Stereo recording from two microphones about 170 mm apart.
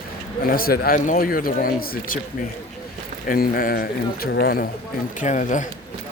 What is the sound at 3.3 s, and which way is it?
Speech, 55° left (ahead or behind).